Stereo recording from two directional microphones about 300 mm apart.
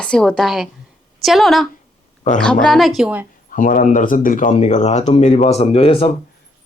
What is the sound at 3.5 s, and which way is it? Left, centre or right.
Speech, left.